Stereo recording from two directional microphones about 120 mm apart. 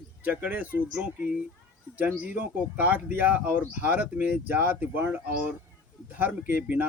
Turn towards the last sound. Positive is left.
turn(degrees=-15)  # may be behind; listen again after turning